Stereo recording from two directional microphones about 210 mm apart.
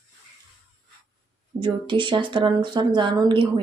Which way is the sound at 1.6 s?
25° right (ahead or behind).